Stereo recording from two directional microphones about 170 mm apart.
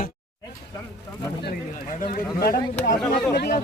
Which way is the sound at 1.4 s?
60° left (ahead or behind).